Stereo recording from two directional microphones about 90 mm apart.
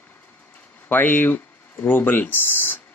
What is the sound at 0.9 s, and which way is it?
Speech, 20° left (ahead or behind).